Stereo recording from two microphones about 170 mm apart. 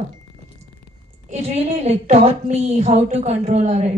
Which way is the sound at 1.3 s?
40° right (ahead or behind).